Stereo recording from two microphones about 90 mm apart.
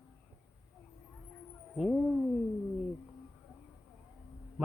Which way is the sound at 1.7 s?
5° right (ahead or behind).